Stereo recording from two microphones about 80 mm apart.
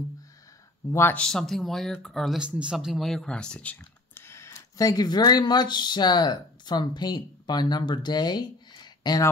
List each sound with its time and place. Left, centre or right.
1.1 s speech: centre
2.3 s a man's voice: centre
3.3 s speech: centre
4.1 s a sound: left
4.6 s speech: left